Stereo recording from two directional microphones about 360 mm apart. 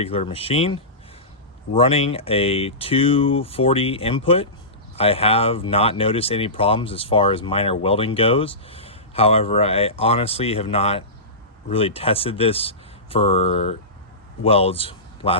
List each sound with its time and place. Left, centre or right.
0.0 s a man's voice: centre